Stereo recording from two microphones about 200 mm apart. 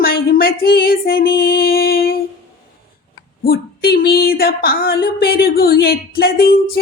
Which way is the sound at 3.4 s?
50° left (ahead or behind).